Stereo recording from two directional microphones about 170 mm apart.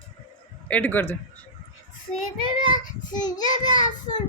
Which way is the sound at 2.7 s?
25° left (ahead or behind).